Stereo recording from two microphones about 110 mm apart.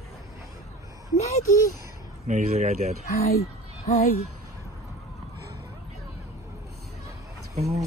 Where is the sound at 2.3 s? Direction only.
90° right.